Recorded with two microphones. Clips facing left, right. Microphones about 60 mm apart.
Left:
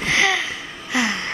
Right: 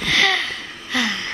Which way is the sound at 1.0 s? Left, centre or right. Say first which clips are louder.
Left 1 dB; left.